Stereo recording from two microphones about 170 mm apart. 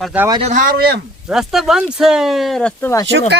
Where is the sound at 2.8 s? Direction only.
15° left (ahead or behind).